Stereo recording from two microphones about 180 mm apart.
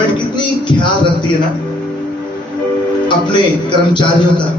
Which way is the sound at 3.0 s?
25° left (ahead or behind).